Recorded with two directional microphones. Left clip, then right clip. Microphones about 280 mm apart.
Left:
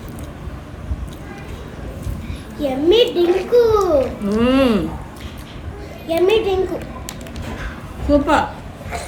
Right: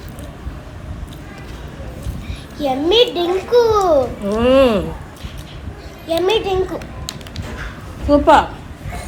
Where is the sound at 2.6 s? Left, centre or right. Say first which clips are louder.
Right 1 dB; right.